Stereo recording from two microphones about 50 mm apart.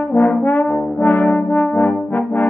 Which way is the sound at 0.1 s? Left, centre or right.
Left.